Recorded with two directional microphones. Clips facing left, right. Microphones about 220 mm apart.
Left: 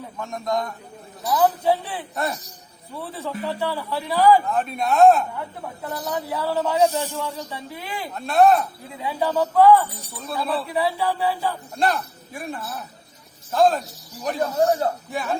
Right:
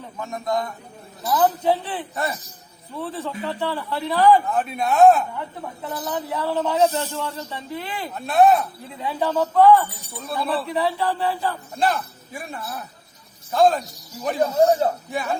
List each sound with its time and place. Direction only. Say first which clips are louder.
0.2 s speech: even; centre (ahead or behind)
1.6 s a man's voice: even; 10° left (ahead or behind)
3.0 s a man's voice: right 1 dB; 10° left (ahead or behind)
8.1 s a man's voice: even; centre (ahead or behind)
14.6 s speech: right 3 dB; 15° right (ahead or behind)
15.1 s speech: right 1 dB; centre (ahead or behind)